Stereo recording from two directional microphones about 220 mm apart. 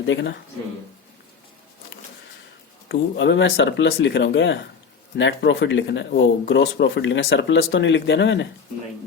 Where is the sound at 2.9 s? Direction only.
55° left (ahead or behind).